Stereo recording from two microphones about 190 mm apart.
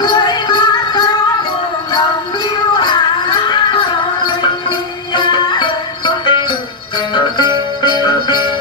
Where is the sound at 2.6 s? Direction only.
25° left (ahead or behind).